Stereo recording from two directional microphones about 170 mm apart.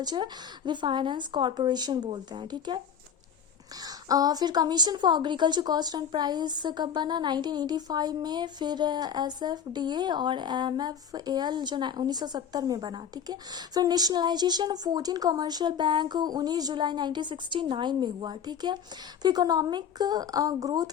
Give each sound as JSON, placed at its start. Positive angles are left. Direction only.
{"t": 0.0, "sound": "a woman's voice", "side_deg": -25}
{"t": 3.8, "sound": "a woman's voice", "side_deg": -20}